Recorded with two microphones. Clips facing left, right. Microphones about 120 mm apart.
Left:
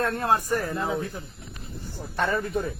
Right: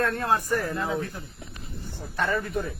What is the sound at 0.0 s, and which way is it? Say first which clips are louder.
Speech: left 1 dB; 25° left (ahead or behind).